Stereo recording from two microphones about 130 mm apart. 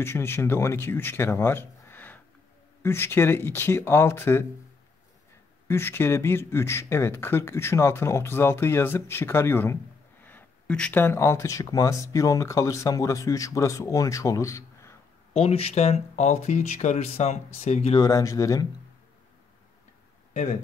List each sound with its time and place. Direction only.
0.0 s speech: 20° left (ahead or behind)
5.7 s speech: 15° left (ahead or behind)
15.3 s speech: 50° left (ahead or behind)
17.9 s speech: 30° left (ahead or behind)